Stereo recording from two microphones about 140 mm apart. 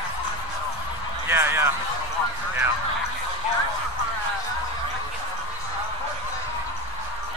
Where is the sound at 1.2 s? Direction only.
15° right (ahead or behind).